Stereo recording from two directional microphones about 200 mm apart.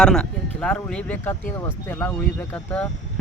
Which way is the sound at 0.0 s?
5° left (ahead or behind).